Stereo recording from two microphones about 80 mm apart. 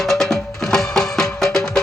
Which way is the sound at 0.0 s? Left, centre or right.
Centre.